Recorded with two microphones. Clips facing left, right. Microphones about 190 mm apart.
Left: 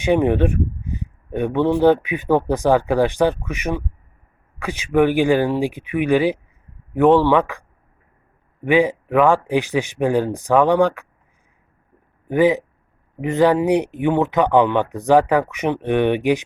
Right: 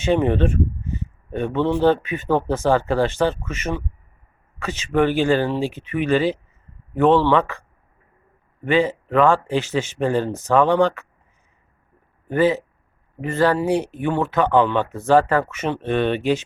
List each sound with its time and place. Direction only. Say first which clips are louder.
0.0 s speech: left 2 dB; 15° left (ahead or behind)
8.6 s speech: left 3 dB; 15° left (ahead or behind)
12.3 s speech: left 2 dB; 15° left (ahead or behind)